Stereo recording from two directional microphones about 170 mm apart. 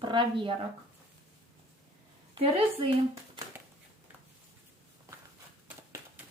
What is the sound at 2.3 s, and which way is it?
Speech, 35° right (ahead or behind).